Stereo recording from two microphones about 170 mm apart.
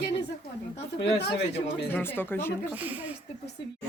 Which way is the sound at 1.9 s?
10° left (ahead or behind).